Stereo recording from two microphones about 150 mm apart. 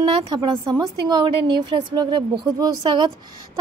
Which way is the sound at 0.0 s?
30° right (ahead or behind).